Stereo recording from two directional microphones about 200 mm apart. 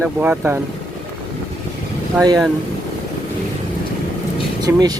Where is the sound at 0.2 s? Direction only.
10° right (ahead or behind).